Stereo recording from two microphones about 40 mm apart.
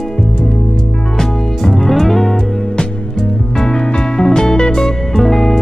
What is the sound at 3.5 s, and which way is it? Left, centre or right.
Music, centre.